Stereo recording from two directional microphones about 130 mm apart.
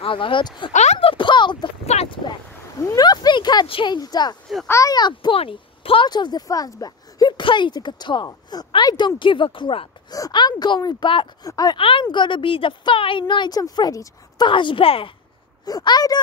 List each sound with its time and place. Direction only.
0.0 s speech: 40° left (ahead or behind)
0.9 s a sound: 40° left (ahead or behind)
1.9 s a sound: 55° left (ahead or behind)
2.8 s speech: 30° left (ahead or behind)
10.1 s speech: 30° left (ahead or behind)
11.8 s speech: 40° left (ahead or behind)
15.6 s speech: 30° left (ahead or behind)